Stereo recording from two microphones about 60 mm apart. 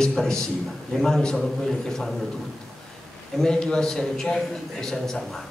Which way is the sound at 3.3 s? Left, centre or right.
Centre.